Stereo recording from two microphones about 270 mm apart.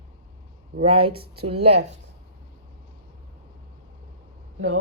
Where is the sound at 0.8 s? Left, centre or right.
Centre.